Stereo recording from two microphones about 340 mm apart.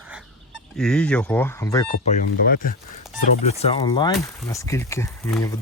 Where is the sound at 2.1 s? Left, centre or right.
Left.